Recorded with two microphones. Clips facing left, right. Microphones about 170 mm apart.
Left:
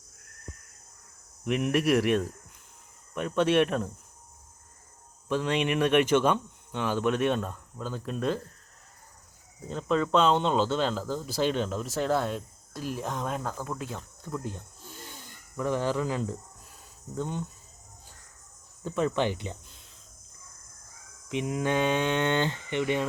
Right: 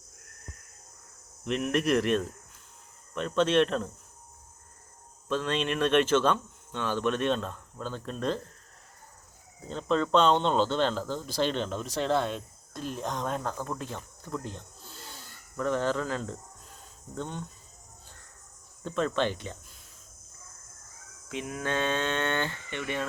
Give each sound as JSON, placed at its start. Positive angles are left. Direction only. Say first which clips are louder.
{"t": 1.5, "sound": "speech", "louder": "left 2 dB", "side_deg": 10}
{"t": 5.3, "sound": "speech", "louder": "left 2 dB", "side_deg": 15}
{"t": 9.6, "sound": "speech", "louder": "left 1 dB", "side_deg": 5}
{"t": 18.9, "sound": "speech", "louder": "left 1 dB", "side_deg": 15}
{"t": 21.2, "sound": "speech", "louder": "left 5 dB", "side_deg": 20}